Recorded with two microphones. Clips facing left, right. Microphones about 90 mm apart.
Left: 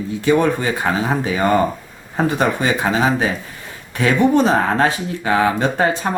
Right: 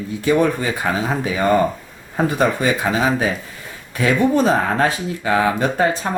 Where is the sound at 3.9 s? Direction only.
20° left (ahead or behind).